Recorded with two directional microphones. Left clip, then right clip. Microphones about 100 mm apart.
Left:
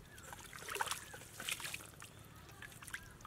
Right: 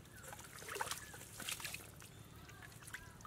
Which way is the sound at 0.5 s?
5° left (ahead or behind).